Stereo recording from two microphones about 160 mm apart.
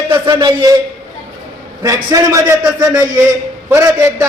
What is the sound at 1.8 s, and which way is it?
A man's voice, 20° right (ahead or behind).